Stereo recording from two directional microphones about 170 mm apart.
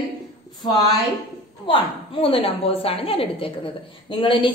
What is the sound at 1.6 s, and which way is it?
A woman's voice, 30° left (ahead or behind).